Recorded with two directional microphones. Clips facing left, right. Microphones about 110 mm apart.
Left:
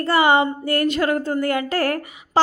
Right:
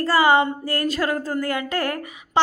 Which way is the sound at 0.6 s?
30° right (ahead or behind).